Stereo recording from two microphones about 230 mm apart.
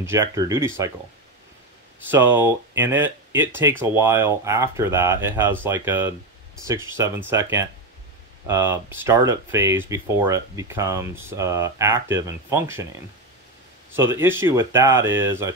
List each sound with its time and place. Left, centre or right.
0.0 s speech: centre
2.0 s speech: centre
13.9 s speech: centre